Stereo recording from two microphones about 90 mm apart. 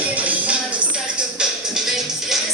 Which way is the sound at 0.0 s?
15° right (ahead or behind).